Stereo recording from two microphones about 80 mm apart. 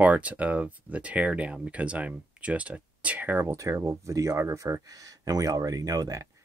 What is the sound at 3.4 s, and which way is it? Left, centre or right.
Speech, right.